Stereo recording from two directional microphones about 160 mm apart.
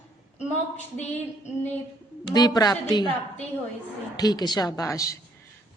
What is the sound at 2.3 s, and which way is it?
Speech, 25° left (ahead or behind).